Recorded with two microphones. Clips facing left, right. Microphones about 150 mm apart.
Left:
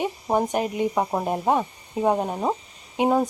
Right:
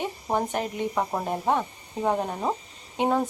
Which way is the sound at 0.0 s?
15° left (ahead or behind).